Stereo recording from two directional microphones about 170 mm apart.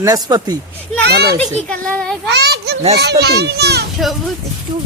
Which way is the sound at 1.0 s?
70° right (ahead or behind).